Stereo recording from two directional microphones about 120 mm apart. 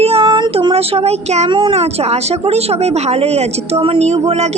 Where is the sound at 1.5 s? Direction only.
45° right (ahead or behind).